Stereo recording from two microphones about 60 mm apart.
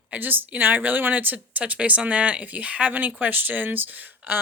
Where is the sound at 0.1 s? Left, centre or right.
Right.